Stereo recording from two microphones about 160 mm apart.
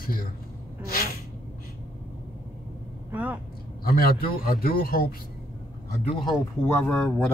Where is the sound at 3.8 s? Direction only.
65° left (ahead or behind).